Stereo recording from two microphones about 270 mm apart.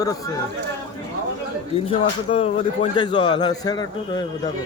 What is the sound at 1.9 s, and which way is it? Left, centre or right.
Speech, centre.